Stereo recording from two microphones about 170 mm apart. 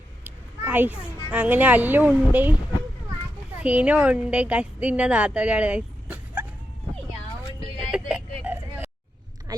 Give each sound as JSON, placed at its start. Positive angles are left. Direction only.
{"t": 0.3, "sound": "a woman's voice", "side_deg": -10}
{"t": 3.6, "sound": "a woman's voice", "side_deg": -5}
{"t": 7.8, "sound": "vehicle", "side_deg": -5}
{"t": 9.5, "sound": "a sound", "side_deg": -25}